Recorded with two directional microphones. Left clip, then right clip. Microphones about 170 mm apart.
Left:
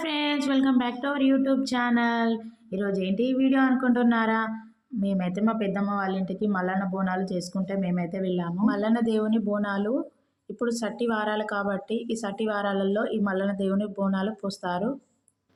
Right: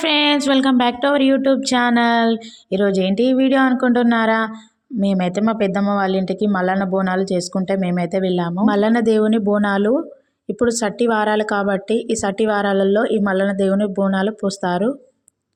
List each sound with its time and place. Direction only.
0.0 s speech: 55° right (ahead or behind)